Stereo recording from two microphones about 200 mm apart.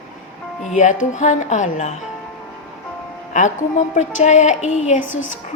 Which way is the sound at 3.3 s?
40° left (ahead or behind).